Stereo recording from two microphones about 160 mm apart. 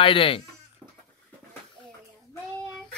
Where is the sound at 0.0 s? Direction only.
35° left (ahead or behind).